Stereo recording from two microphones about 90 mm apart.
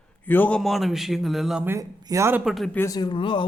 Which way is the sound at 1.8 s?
35° right (ahead or behind).